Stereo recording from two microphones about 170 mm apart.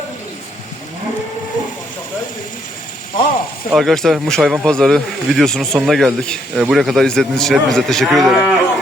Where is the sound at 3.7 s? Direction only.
Centre (ahead or behind).